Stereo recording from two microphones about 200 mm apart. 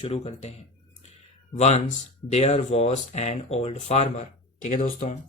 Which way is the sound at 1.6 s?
35° left (ahead or behind).